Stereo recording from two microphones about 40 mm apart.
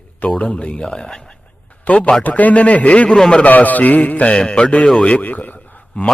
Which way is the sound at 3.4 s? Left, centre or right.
Left.